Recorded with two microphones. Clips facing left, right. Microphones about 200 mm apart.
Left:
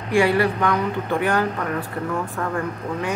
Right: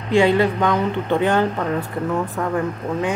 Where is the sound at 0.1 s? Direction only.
20° right (ahead or behind).